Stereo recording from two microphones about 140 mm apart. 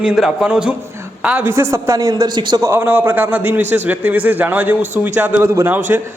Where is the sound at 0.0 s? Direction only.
5° right (ahead or behind); by 2.6 s 35° right (ahead or behind).